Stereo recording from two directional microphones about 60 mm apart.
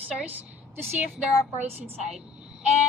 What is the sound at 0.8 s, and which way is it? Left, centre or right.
Speech, right.